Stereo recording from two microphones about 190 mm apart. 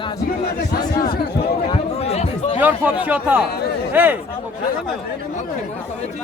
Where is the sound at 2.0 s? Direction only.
35° left (ahead or behind).